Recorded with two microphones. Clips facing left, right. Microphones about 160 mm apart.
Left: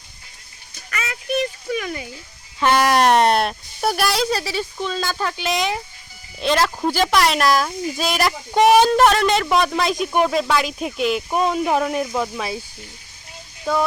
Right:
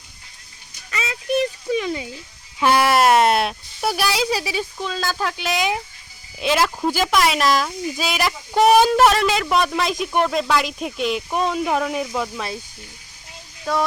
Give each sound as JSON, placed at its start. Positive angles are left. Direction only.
{"t": 0.9, "sound": "a sound", "side_deg": -25}
{"t": 2.6, "sound": "speech", "side_deg": -10}
{"t": 13.7, "sound": "speech", "side_deg": 0}